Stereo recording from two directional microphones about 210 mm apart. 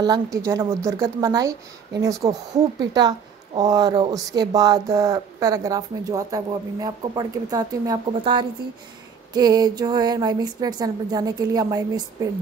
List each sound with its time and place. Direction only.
0.0 s a woman's voice: 15° right (ahead or behind)